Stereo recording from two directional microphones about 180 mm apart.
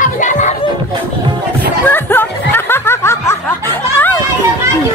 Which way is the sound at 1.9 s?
10° left (ahead or behind).